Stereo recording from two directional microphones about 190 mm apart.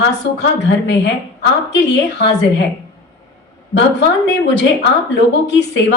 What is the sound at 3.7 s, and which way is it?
Speech, 65° left (ahead or behind).